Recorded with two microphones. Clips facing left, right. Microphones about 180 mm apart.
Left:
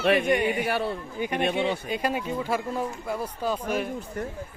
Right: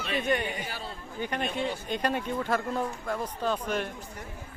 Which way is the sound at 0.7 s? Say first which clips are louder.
Left 11 dB; 65° left (ahead or behind).